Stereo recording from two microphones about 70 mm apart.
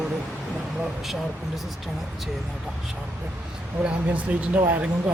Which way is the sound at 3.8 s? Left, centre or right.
Right.